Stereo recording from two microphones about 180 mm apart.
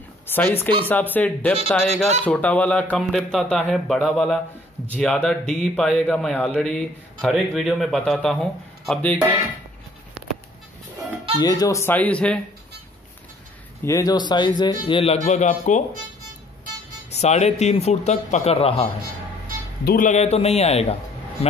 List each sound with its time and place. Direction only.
0.3 s a man's voice: 10° left (ahead or behind)
11.3 s speech: 20° left (ahead or behind)
13.8 s speech: 20° left (ahead or behind)
15.2 s speech: 45° left (ahead or behind)
17.1 s speech: 40° left (ahead or behind)
19.8 s speech: 60° left (ahead or behind)
20.1 s speech: 35° left (ahead or behind)